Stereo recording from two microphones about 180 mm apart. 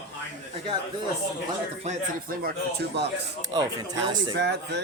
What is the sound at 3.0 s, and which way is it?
Speech, 70° right (ahead or behind).